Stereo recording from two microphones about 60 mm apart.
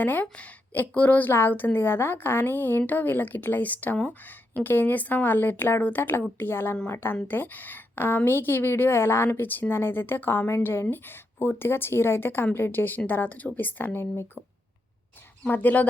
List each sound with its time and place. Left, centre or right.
0.0 s speech: left
1.3 s a woman's voice: left
15.4 s speech: left